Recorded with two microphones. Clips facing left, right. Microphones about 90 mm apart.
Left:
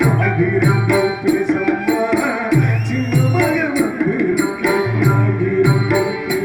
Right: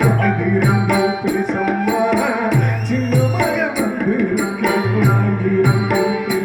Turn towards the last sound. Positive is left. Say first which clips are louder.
# even
turn(degrees=-45)  # may be behind; listen again after turning